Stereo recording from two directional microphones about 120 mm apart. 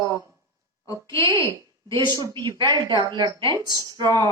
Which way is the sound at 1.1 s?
40° right (ahead or behind).